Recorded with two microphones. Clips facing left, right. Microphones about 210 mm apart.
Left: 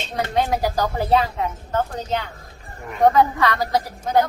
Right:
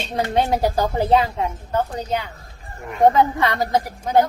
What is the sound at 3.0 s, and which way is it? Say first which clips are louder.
Speech: right 1 dB; 20° right (ahead or behind).